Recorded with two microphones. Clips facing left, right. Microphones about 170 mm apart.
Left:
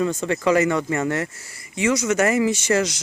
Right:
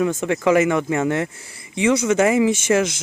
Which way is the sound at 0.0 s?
15° right (ahead or behind).